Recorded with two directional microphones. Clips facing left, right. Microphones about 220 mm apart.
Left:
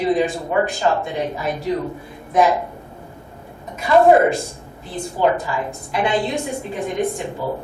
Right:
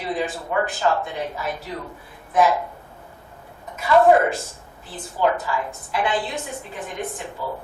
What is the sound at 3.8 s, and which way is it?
Speech, 20° left (ahead or behind).